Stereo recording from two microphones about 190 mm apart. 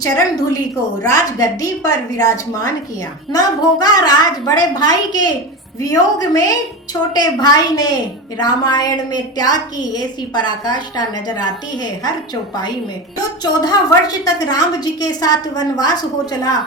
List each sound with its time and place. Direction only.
0.0 s a woman's voice: 20° left (ahead or behind)
13.4 s a woman's voice: 20° left (ahead or behind)